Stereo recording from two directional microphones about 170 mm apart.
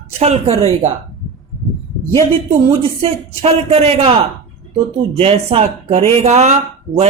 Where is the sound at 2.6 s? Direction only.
35° right (ahead or behind).